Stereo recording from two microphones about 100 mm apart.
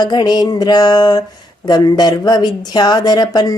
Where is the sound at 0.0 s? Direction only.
45° left (ahead or behind).